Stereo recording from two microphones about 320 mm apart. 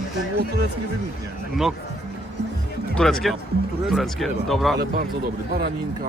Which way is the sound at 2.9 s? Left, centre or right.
Centre.